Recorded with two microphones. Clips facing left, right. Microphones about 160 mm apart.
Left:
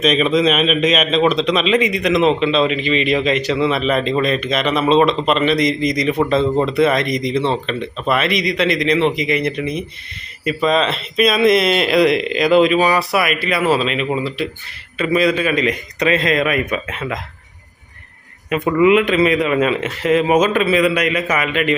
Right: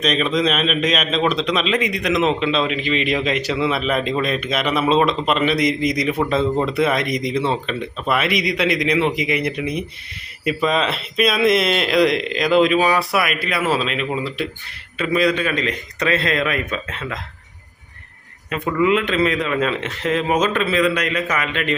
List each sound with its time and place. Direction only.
0.0 s a man's voice: 5° left (ahead or behind)
18.5 s a man's voice: 15° left (ahead or behind)